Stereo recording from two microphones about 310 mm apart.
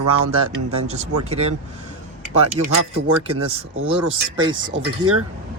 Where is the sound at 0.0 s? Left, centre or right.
Right.